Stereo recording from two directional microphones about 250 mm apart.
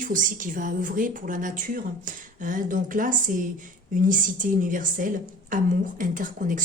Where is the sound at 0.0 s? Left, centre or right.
Right.